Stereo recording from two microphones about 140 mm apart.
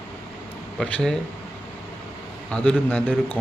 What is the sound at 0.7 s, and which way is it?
Speech, 5° left (ahead or behind).